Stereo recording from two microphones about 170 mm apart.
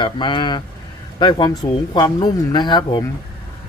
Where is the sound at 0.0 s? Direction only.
30° left (ahead or behind).